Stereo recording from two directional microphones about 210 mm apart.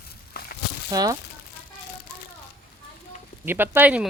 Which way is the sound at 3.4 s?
10° right (ahead or behind).